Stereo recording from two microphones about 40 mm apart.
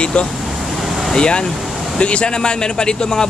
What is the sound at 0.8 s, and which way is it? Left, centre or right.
Vehicle, centre.